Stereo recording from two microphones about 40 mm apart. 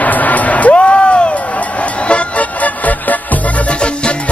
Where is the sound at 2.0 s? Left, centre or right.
Left.